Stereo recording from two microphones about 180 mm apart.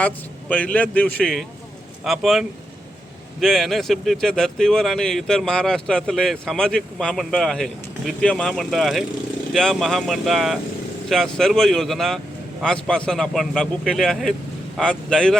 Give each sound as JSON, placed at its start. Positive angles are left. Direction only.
{"t": 0.0, "sound": "speech", "side_deg": 10}